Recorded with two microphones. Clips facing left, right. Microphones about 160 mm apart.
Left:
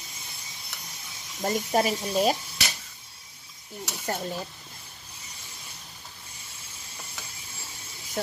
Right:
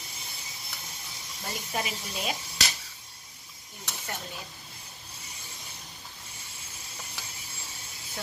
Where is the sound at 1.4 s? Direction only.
45° left (ahead or behind).